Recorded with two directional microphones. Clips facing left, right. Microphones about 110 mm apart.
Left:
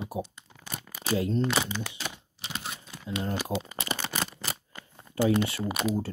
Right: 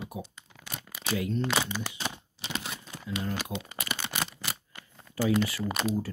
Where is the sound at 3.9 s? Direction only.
35° left (ahead or behind).